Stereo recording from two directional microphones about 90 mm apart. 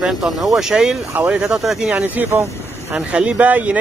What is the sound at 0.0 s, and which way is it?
Speech, 5° right (ahead or behind).